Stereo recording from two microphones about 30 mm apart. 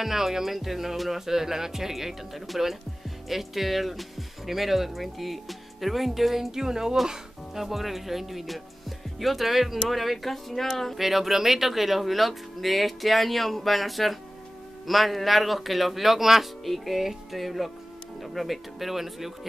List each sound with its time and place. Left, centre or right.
0.0 s speech: centre
6.5 s speech: centre
7.5 s speech: centre
11.0 s speech: centre
16.6 s speech: centre